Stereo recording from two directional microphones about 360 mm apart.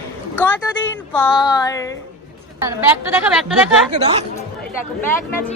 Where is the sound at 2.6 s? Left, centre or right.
Centre.